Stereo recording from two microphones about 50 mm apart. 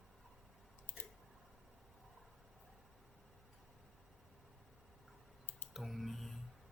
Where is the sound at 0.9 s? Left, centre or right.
Left.